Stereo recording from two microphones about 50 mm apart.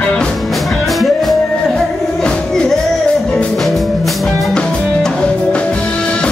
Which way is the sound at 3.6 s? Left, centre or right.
Centre.